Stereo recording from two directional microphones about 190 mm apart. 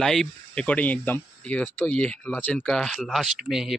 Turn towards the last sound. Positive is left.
turn(degrees=0)  # may be behind; listen again after turning